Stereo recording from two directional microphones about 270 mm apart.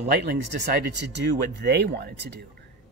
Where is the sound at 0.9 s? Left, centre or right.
Right.